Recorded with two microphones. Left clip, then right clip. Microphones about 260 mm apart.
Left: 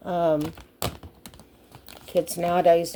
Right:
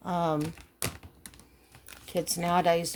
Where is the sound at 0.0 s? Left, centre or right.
Right.